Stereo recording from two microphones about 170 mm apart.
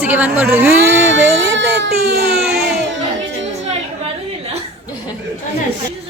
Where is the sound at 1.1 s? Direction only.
90° right; by 3.0 s 65° right (ahead or behind).